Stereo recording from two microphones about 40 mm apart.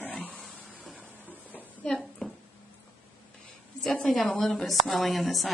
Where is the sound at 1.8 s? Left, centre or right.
Centre.